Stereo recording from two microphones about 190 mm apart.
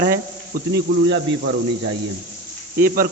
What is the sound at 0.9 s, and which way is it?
Speech, 60° right (ahead or behind).